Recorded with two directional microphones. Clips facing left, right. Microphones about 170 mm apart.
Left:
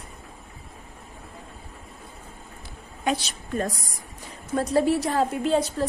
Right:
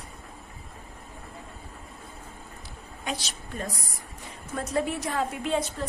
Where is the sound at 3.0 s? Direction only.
55° left (ahead or behind).